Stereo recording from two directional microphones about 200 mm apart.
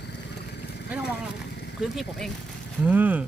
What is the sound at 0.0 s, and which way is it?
Vehicle, 55° left (ahead or behind).